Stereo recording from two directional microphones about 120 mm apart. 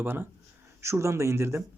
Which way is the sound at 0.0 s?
15° right (ahead or behind).